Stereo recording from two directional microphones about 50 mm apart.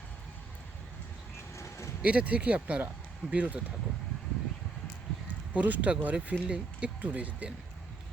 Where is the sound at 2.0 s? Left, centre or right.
Right.